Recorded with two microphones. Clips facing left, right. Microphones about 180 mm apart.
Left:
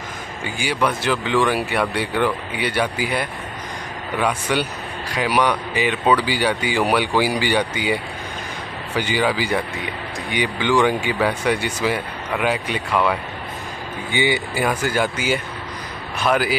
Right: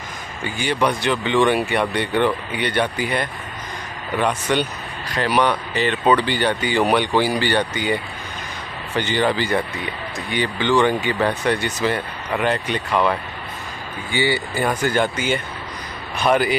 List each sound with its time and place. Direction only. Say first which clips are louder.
0.4 s speech: right 1 dB; 10° left (ahead or behind)
14.1 s speech: even; 15° left (ahead or behind)